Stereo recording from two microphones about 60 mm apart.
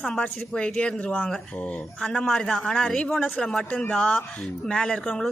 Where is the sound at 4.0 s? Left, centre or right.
Centre.